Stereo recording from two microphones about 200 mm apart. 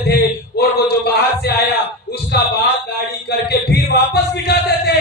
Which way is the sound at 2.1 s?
55° left (ahead or behind).